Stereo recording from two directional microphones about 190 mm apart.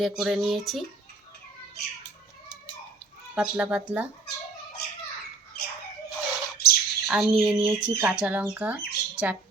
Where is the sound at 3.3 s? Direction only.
5° right (ahead or behind).